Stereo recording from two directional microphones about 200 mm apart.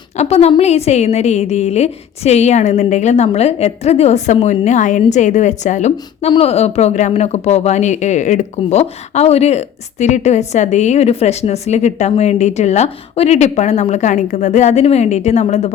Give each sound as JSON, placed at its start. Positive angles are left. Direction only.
{"t": 0.2, "sound": "speech", "side_deg": 30}